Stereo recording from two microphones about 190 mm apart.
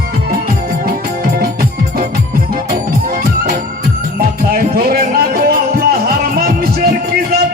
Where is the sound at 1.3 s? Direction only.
50° right (ahead or behind).